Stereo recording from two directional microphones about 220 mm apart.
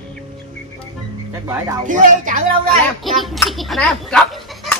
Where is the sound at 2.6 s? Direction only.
Centre (ahead or behind).